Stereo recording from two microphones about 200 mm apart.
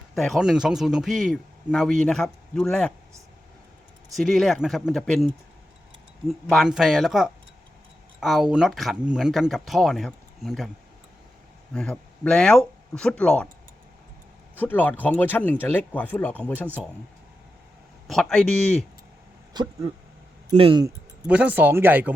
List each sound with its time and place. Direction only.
0.1 s a man's voice: centre (ahead or behind)
4.1 s a man's voice: centre (ahead or behind)
11.7 s speech: 5° left (ahead or behind)
14.5 s speech: 10° left (ahead or behind)
18.1 s a man's voice: 5° left (ahead or behind)
20.5 s speech: 25° right (ahead or behind)
20.8 s speech: 10° right (ahead or behind)